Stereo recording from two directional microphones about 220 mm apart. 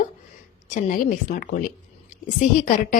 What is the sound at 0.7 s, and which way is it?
Speech, 35° left (ahead or behind).